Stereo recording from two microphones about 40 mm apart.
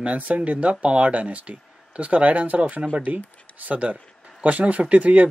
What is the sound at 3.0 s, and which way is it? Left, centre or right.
Speech, right.